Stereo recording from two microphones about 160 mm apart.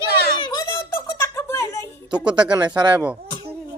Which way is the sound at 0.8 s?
15° left (ahead or behind).